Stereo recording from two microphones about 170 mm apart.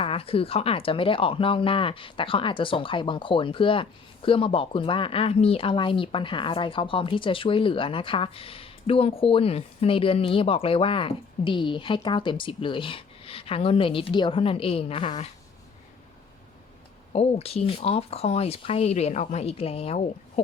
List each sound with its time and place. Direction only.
0.0 s speech: 35° left (ahead or behind)
17.1 s speech: 35° left (ahead or behind)